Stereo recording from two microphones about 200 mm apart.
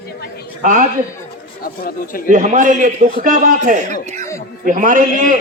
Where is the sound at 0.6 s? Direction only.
40° right (ahead or behind).